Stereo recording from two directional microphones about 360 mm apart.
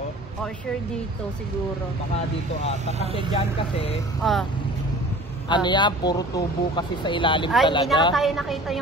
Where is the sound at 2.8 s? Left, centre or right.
Centre.